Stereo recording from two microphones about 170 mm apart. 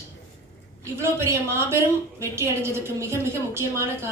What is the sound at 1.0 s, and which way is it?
A woman's voice, 15° right (ahead or behind).